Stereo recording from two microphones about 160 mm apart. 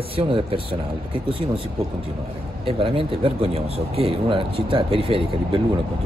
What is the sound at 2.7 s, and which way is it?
Speech, 35° right (ahead or behind).